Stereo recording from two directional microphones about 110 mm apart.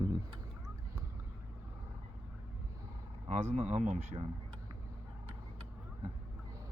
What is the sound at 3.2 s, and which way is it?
Speech, 80° right.